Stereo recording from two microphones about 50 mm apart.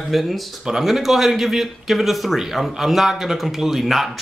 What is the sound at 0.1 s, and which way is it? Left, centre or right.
Speech, centre.